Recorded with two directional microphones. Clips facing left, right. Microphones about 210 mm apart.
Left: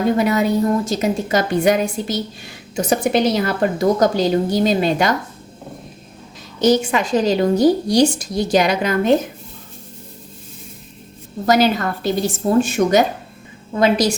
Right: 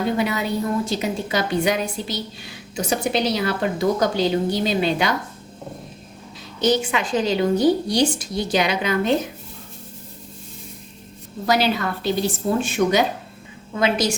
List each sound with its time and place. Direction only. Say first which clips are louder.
0.2 s a woman's voice: left 6 dB; 45° left (ahead or behind)
6.6 s a woman's voice: left 5 dB; 40° left (ahead or behind)
11.4 s a woman's voice: left 5 dB; 45° left (ahead or behind)